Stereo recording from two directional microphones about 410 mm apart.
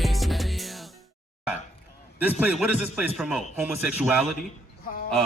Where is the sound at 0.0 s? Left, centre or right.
Centre.